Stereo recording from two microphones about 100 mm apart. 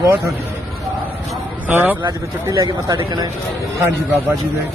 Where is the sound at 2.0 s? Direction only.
35° right (ahead or behind).